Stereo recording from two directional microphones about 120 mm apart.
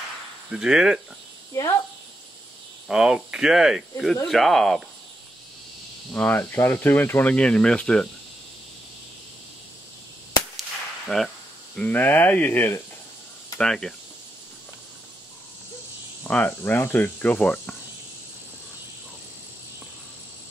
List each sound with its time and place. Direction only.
0.5 s speech: 5° right (ahead or behind)
1.5 s speech: 25° left (ahead or behind)
2.9 s speech: 5° right (ahead or behind)
6.1 s speech: 15° left (ahead or behind)
11.1 s speech: 10° left (ahead or behind)
13.6 s speech: 5° left (ahead or behind)
16.3 s speech: 15° left (ahead or behind)